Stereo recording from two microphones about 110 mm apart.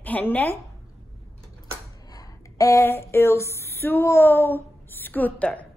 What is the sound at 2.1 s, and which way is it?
Speech, 30° left (ahead or behind).